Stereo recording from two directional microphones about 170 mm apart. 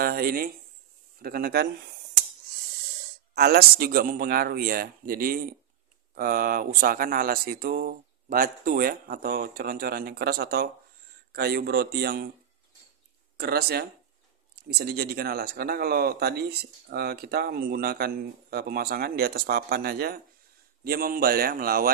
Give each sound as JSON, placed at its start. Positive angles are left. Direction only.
{"t": 0.0, "sound": "a sound", "side_deg": -60}
{"t": 1.2, "sound": "speech", "side_deg": -60}
{"t": 3.3, "sound": "speech", "side_deg": -70}
{"t": 13.4, "sound": "speech", "side_deg": -70}